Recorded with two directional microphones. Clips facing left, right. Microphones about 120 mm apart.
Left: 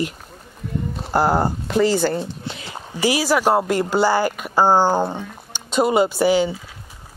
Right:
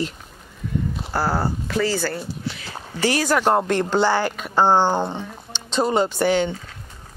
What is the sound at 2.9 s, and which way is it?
Speech, 10° left (ahead or behind).